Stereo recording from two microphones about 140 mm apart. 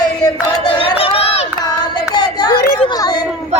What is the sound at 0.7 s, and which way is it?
Crowd, 45° left (ahead or behind).